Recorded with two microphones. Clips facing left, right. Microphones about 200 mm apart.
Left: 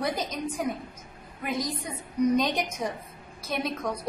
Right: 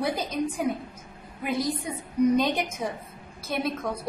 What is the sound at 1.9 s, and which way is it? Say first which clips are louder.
A woman's voice: right 1 dB; 5° right (ahead or behind).